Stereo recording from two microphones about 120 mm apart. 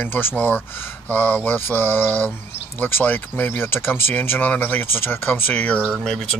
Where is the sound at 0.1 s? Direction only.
15° left (ahead or behind).